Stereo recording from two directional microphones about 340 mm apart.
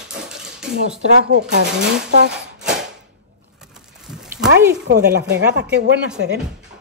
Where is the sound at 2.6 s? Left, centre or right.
Centre.